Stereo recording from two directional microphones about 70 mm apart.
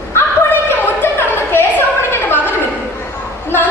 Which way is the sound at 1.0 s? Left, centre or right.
Left.